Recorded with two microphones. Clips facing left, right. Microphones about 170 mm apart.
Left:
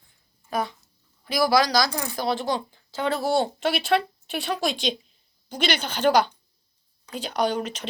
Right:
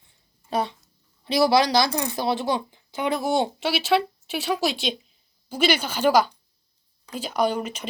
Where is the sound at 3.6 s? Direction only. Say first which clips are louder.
Right 1 dB; 5° right (ahead or behind).